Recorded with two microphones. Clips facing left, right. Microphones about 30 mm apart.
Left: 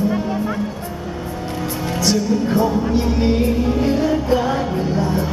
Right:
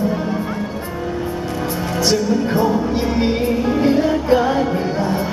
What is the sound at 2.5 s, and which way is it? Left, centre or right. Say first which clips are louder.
Music: even; centre.